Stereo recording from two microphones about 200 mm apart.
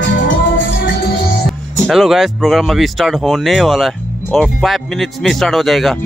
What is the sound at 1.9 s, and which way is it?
Speech, centre (ahead or behind).